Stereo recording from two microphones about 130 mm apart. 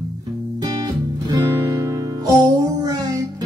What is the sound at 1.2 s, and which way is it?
Music, 25° right (ahead or behind).